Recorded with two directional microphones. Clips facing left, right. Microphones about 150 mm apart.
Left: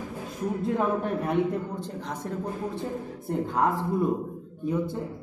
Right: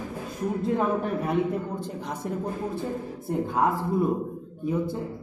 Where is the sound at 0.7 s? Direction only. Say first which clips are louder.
Right 1 dB; centre (ahead or behind).